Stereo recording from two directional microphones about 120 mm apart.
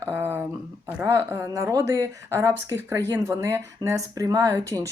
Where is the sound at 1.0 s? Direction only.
20° right (ahead or behind).